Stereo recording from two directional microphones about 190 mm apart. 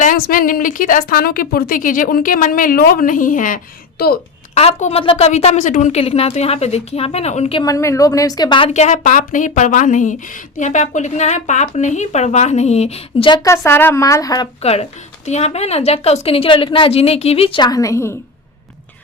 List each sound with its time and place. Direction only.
0.0 s a woman's voice: 45° left (ahead or behind)
4.5 s a woman's voice: 35° left (ahead or behind)
7.6 s a woman's voice: 15° left (ahead or behind)
14.6 s a woman's voice: 35° left (ahead or behind); by 18.1 s 15° left (ahead or behind)